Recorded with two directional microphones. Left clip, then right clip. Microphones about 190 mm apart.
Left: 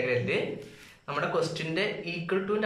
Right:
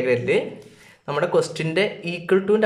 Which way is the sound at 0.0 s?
45° right (ahead or behind).